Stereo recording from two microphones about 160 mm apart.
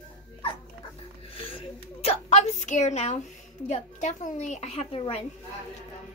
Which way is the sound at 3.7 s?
50° left (ahead or behind).